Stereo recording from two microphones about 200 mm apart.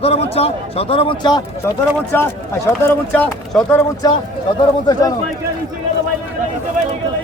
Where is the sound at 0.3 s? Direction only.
30° left (ahead or behind).